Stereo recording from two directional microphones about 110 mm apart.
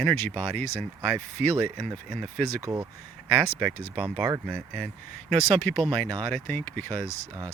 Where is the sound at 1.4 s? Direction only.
15° left (ahead or behind).